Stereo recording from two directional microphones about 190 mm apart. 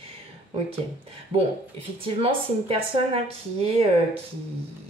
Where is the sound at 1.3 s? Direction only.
30° right (ahead or behind).